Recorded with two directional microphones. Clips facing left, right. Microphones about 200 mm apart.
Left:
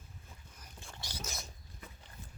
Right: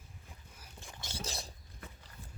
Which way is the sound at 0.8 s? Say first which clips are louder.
Right 1 dB; 15° right (ahead or behind).